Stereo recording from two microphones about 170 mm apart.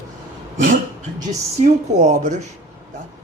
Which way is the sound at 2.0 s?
45° right (ahead or behind).